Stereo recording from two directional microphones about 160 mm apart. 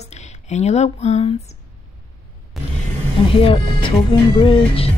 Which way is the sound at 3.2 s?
35° left (ahead or behind).